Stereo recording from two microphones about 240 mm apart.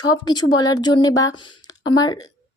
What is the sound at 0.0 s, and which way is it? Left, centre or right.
Speech, centre.